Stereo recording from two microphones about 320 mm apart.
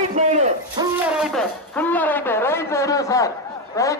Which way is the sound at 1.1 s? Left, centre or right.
Centre.